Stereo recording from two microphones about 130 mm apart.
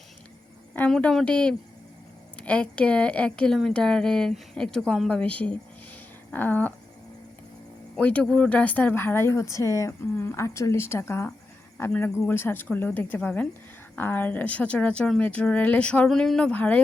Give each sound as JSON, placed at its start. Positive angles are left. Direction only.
{"t": 0.8, "sound": "a woman's voice", "side_deg": 5}
{"t": 7.9, "sound": "a woman's voice", "side_deg": 10}